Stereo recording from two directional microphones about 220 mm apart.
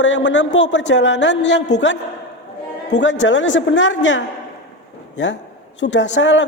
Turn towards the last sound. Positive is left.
turn(degrees=55)  # may be behind; listen again after turning